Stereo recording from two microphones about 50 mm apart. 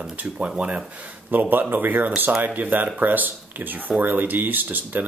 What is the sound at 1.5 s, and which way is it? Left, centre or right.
Speech, right.